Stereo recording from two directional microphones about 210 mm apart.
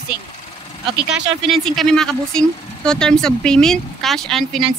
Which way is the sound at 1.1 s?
Centre (ahead or behind).